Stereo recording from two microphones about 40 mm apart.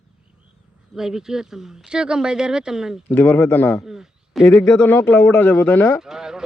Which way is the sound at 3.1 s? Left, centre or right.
Left.